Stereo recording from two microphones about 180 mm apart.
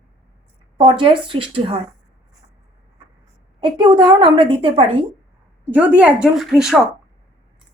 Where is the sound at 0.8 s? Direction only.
30° right (ahead or behind).